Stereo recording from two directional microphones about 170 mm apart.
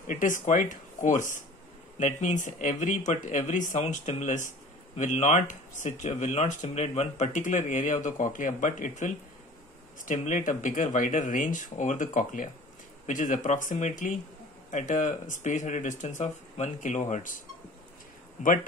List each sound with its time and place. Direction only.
0.0 s speech: 50° left (ahead or behind)
18.4 s speech: 50° left (ahead or behind)